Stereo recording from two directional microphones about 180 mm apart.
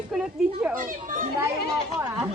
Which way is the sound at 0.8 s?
50° right (ahead or behind).